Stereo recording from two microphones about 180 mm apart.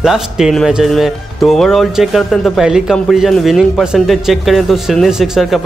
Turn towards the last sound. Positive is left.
turn(degrees=-5)  # may be behind; listen again after turning